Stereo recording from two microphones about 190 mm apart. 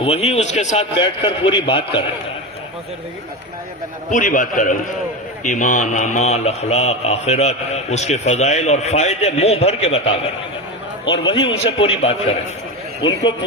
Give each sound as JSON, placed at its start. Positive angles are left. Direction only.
{"t": 0.0, "sound": "speech", "side_deg": 30}
{"t": 0.9, "sound": "a man's voice", "side_deg": 25}
{"t": 4.1, "sound": "a man's voice", "side_deg": 45}